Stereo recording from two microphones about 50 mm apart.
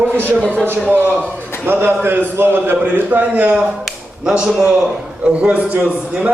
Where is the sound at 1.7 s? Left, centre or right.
Right.